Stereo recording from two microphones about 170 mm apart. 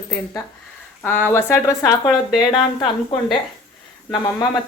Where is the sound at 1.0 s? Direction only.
10° left (ahead or behind).